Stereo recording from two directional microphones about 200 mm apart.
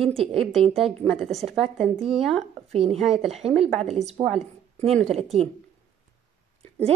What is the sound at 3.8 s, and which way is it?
Speech, 35° right (ahead or behind).